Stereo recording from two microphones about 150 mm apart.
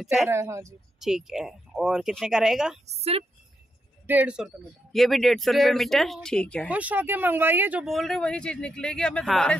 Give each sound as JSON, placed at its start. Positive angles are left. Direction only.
{"t": 0.0, "sound": "speech", "side_deg": 0}
{"t": 0.3, "sound": "speech", "side_deg": -20}
{"t": 0.9, "sound": "speech", "side_deg": -5}
{"t": 2.9, "sound": "a woman's voice", "side_deg": -45}
{"t": 4.1, "sound": "speech", "side_deg": -10}
{"t": 6.7, "sound": "speech", "side_deg": -10}
{"t": 7.8, "sound": "speech", "side_deg": 0}